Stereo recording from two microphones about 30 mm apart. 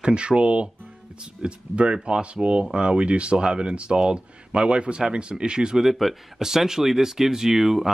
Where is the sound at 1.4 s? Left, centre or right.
Right.